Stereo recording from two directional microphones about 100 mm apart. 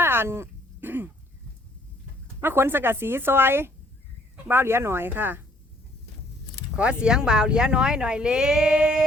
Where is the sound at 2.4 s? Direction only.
20° right (ahead or behind).